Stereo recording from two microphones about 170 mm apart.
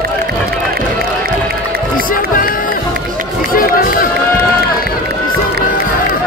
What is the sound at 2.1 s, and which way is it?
Run, 55° left (ahead or behind).